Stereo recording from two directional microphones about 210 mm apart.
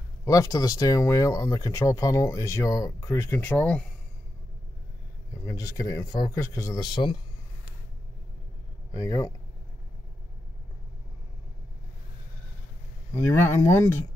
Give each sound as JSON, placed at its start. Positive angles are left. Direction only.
{"t": 0.2, "sound": "speech", "side_deg": 15}
{"t": 5.4, "sound": "speech", "side_deg": 15}
{"t": 8.9, "sound": "speech", "side_deg": 20}
{"t": 13.2, "sound": "speech", "side_deg": 10}